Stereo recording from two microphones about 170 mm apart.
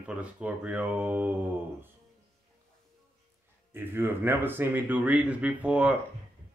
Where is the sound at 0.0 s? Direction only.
5° right (ahead or behind).